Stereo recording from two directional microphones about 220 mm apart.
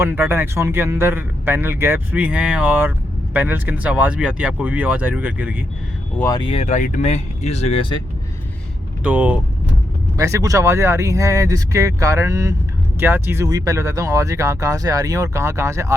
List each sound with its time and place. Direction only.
0.0 s speech: 10° right (ahead or behind)
6.1 s speech: 15° left (ahead or behind)
9.0 s speech: 5° right (ahead or behind)